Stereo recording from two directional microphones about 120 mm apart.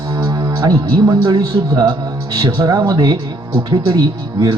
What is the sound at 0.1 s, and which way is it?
Music, 35° right (ahead or behind).